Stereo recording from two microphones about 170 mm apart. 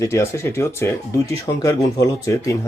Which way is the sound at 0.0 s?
15° left (ahead or behind).